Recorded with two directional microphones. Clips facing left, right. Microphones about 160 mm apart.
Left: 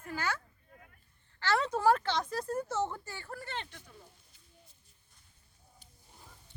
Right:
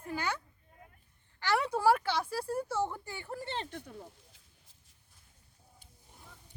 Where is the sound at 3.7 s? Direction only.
55° right (ahead or behind).